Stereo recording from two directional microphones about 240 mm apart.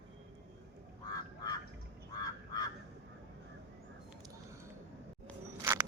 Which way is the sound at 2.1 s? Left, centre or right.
Centre.